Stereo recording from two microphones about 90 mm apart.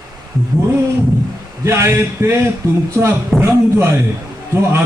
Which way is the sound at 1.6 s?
30° right (ahead or behind).